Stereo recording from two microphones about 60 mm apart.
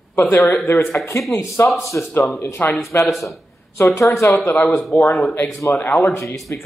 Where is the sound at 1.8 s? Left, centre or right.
Left.